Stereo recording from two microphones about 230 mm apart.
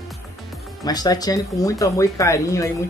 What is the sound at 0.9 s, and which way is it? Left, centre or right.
Speech, centre.